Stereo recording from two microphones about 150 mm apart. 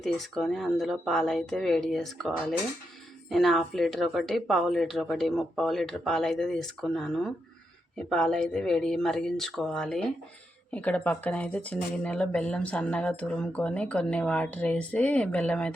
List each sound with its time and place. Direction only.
0.0 s speech: centre (ahead or behind)